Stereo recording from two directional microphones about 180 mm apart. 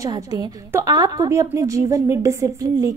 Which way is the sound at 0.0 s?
20° right (ahead or behind).